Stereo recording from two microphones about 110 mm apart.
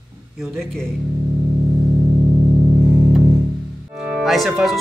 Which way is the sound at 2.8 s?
10° right (ahead or behind).